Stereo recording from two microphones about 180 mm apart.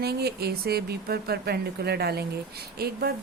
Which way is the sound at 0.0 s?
60° right (ahead or behind).